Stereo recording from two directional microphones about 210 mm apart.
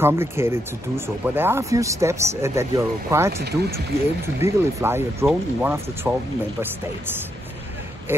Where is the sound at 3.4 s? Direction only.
50° right (ahead or behind).